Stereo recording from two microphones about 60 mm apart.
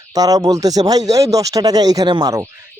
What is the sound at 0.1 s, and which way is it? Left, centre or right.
Speech, right.